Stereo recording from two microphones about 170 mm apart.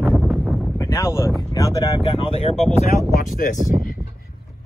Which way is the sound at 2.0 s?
30° left (ahead or behind).